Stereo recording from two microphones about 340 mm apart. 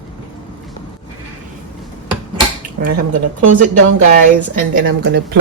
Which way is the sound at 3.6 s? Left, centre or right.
Right.